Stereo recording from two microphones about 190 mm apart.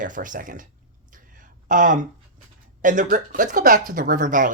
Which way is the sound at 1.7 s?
45° right (ahead or behind).